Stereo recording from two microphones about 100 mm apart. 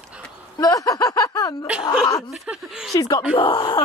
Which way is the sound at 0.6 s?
35° left (ahead or behind).